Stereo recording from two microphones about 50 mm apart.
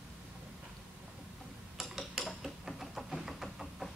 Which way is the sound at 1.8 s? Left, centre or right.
Centre.